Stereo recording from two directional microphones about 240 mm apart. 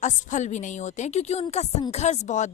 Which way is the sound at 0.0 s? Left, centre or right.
Left.